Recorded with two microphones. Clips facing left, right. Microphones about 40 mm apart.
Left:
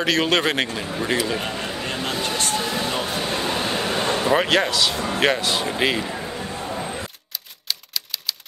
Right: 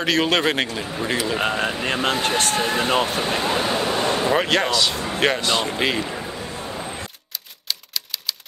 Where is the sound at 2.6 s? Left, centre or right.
Right.